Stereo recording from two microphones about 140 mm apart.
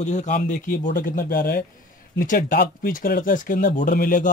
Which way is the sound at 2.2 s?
75° left (ahead or behind).